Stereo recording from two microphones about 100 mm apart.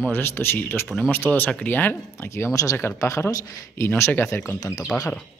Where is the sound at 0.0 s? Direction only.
20° left (ahead or behind).